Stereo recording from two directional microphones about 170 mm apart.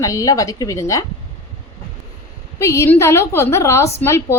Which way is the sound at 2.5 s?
15° left (ahead or behind).